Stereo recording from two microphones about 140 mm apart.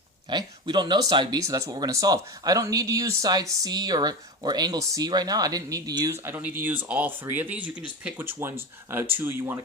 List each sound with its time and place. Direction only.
0.3 s speech: 35° right (ahead or behind); by 9.6 s 15° right (ahead or behind)